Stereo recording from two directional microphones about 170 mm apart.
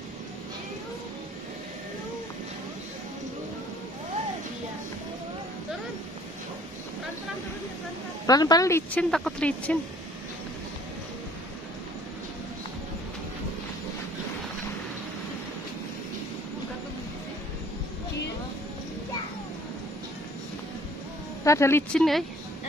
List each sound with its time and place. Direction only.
8.3 s speech: 20° left (ahead or behind)
9.1 s speech: 5° left (ahead or behind)
21.5 s speech: 15° left (ahead or behind)